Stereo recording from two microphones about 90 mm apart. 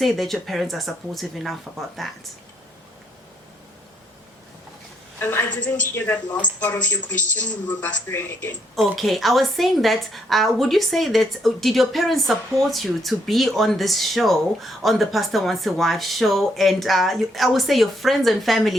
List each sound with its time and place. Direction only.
0.0 s a woman's voice: centre (ahead or behind)
5.2 s speech: 25° left (ahead or behind)
5.5 s a woman's voice: 15° left (ahead or behind)
8.7 s a woman's voice: centre (ahead or behind)